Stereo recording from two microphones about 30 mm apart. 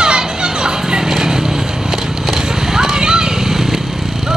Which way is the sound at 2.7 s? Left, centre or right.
Right.